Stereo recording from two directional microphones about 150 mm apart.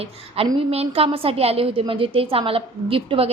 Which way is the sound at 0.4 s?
40° right (ahead or behind).